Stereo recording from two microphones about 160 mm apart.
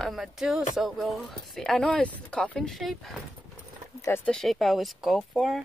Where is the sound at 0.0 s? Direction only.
Centre (ahead or behind).